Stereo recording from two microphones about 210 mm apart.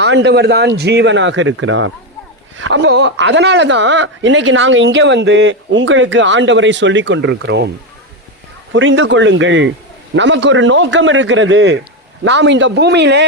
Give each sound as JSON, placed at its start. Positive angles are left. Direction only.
{"t": 0.0, "sound": "speech", "side_deg": -55}
{"t": 2.6, "sound": "speech", "side_deg": -60}
{"t": 8.7, "sound": "speech", "side_deg": -65}